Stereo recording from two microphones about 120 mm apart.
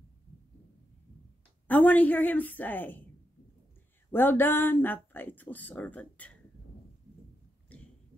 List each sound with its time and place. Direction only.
1.7 s speech: 15° left (ahead or behind)
4.1 s speech: 15° left (ahead or behind)
7.7 s a sound: 10° left (ahead or behind)